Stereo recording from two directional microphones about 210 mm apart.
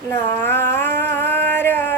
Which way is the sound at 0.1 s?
10° left (ahead or behind).